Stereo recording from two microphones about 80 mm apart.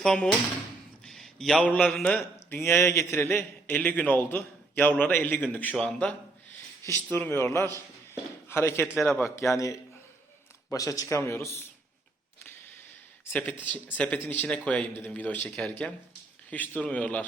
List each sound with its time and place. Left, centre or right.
0.0 s a man's voice: centre
1.0 s a sound: centre
1.6 s a man's voice: centre
1.9 s a man's voice: centre
2.5 s a man's voice: left; by 6.1 s centre
7.1 s a man's voice: left
13.3 s a man's voice: left